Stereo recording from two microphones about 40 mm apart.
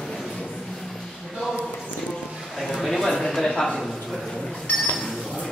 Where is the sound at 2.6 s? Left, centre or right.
Centre.